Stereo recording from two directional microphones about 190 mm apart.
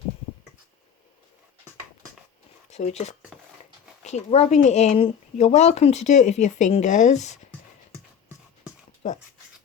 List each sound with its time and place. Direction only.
2.6 s speech: 35° left (ahead or behind)